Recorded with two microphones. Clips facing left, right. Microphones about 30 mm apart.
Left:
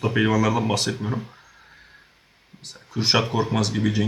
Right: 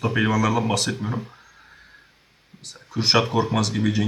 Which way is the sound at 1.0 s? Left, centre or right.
Centre.